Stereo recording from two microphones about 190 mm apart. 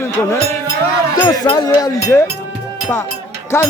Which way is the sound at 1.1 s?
20° left (ahead or behind).